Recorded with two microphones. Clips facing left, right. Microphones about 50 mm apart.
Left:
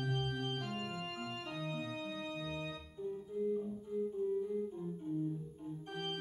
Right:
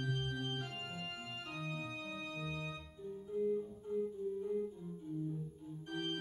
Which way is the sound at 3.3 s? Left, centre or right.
Centre.